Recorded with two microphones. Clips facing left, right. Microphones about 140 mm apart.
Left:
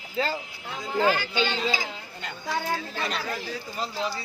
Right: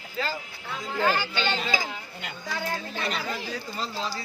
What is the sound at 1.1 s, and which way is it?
Speech, 10° left (ahead or behind).